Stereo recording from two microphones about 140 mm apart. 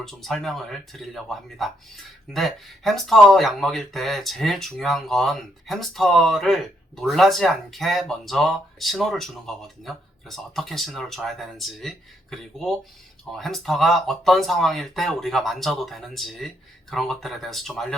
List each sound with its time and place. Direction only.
0.0 s speech: centre (ahead or behind)